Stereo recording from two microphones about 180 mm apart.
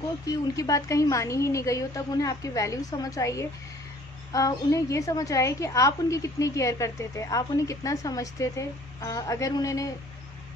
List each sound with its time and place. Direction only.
0.3 s a woman's voice: 20° left (ahead or behind)